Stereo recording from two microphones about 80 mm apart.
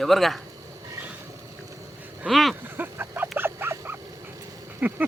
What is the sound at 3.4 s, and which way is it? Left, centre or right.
Wild animals, right.